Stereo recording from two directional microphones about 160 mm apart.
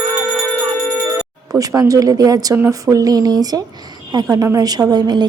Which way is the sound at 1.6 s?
20° right (ahead or behind).